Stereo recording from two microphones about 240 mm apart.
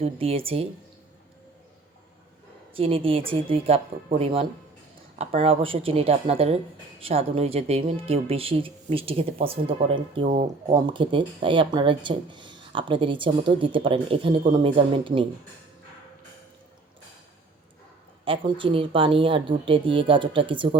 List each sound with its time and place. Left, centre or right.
0.0 s speech: right
2.7 s speech: right
10.2 s speech: right
10.7 s speech: centre
18.3 s speech: right